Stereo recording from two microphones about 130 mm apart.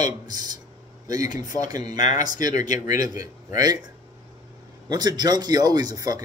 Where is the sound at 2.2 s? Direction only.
30° right (ahead or behind).